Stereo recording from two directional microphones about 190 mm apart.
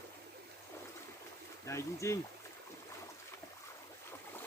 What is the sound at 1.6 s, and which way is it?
Speech, 15° left (ahead or behind).